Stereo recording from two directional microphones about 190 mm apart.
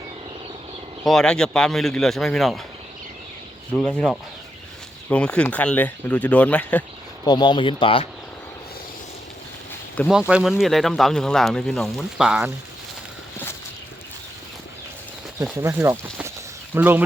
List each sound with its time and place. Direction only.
1.0 s speech: 5° left (ahead or behind)
3.7 s speech: 5° left (ahead or behind)
7.3 s speech: 25° left (ahead or behind)
10.1 s speech: 5° right (ahead or behind)
15.5 s speech: 15° right (ahead or behind)